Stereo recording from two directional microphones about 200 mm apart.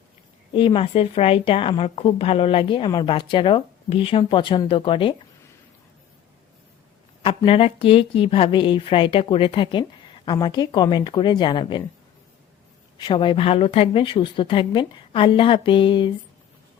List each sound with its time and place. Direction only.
0.5 s a woman's voice: 25° left (ahead or behind)
7.3 s a woman's voice: 25° left (ahead or behind)
13.0 s a woman's voice: 25° left (ahead or behind)